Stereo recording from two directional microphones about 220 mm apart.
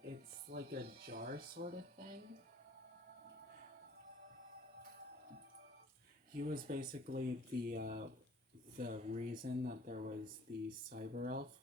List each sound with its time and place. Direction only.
0.1 s speech: 50° right (ahead or behind)
6.3 s speech: 40° right (ahead or behind)